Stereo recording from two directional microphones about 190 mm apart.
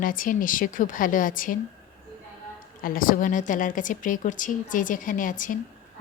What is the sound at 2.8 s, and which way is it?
A woman's voice, 45° left (ahead or behind).